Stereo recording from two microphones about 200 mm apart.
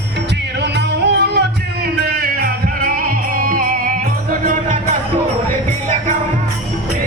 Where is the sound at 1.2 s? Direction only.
55° right (ahead or behind).